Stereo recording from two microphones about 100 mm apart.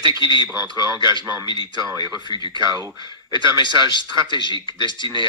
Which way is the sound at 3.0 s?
50° left (ahead or behind).